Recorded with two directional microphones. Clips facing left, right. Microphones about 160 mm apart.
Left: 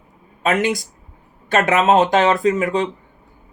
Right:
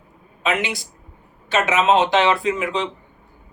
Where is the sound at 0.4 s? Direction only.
45° left (ahead or behind).